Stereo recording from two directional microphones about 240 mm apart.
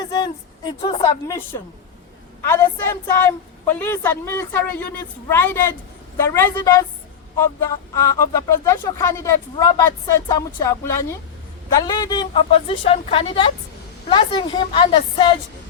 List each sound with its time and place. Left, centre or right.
0.0 s a woman's voice: centre